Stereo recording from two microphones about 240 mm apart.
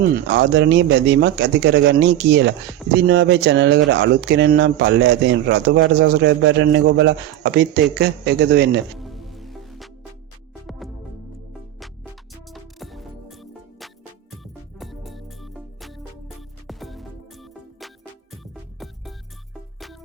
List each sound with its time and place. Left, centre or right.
0.3 s speech: right
9.0 s music: centre
12.5 s music: centre